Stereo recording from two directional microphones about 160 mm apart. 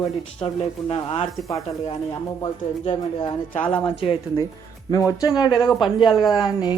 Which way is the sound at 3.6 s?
10° left (ahead or behind).